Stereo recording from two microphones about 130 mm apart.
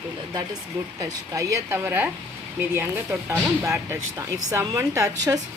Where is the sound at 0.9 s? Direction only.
25° right (ahead or behind).